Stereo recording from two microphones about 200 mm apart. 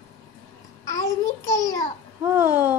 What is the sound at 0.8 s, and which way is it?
Babbling, 15° left (ahead or behind).